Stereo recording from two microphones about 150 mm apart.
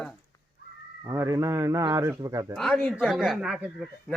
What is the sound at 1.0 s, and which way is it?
Speech, 20° right (ahead or behind).